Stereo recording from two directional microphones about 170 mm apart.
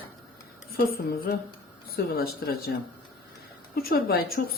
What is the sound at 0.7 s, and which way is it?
A woman's voice, 60° left (ahead or behind).